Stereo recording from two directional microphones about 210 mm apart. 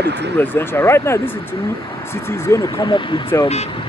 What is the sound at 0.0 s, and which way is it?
Speech, 55° right (ahead or behind).